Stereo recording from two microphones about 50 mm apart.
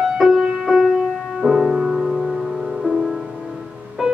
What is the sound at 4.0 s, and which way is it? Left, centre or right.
Music, centre.